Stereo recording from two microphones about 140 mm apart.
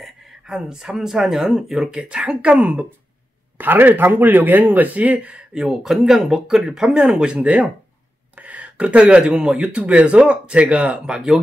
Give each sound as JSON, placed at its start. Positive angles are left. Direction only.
{"t": 0.0, "sound": "speech", "side_deg": -5}